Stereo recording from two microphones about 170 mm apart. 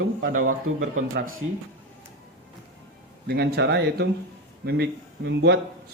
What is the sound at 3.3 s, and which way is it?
Speech, 75° right (ahead or behind).